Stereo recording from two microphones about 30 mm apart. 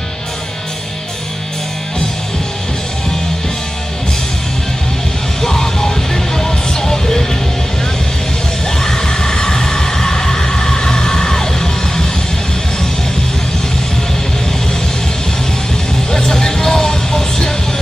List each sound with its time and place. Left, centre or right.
5.4 s music: centre
8.6 s music: centre
16.1 s music: centre